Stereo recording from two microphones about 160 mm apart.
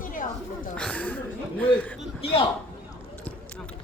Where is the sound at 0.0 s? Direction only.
55° left (ahead or behind).